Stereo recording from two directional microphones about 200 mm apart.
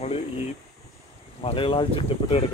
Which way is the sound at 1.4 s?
25° left (ahead or behind).